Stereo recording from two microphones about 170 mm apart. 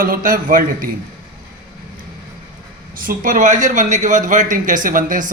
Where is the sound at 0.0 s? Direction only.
55° right (ahead or behind).